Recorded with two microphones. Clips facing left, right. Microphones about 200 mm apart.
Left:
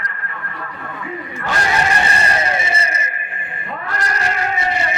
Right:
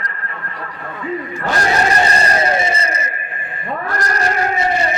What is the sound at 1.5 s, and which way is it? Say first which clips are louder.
Vehicle: right 3 dB; 40° right (ahead or behind).